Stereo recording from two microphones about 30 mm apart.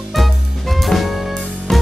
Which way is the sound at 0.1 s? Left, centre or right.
Centre.